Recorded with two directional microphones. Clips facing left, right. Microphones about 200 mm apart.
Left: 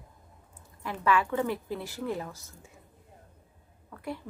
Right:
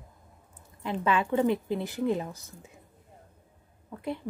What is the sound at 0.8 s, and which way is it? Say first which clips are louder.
A woman's voice: even; 20° right (ahead or behind).